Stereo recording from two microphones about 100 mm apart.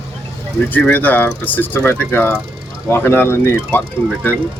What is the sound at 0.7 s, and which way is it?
Speech, 15° left (ahead or behind).